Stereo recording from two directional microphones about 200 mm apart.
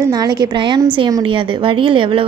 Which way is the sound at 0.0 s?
20° right (ahead or behind).